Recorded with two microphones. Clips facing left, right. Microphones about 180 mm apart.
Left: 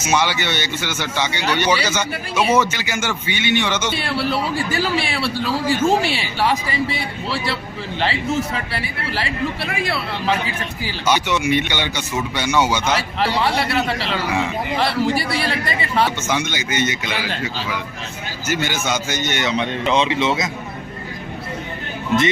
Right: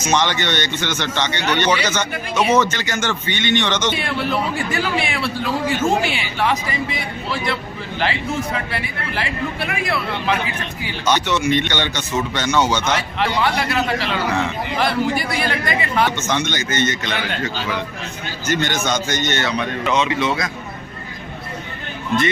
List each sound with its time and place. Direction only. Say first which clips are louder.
0.0 s a man's voice: right 1 dB; 10° left (ahead or behind)
3.9 s a man's voice: even; 35° left (ahead or behind)
8.7 s a man's voice: even; 30° left (ahead or behind)
11.0 s a man's voice: right 1 dB; 10° left (ahead or behind)
13.0 s a man's voice: even; 30° left (ahead or behind)
16.1 s a man's voice: right 1 dB; 10° left (ahead or behind)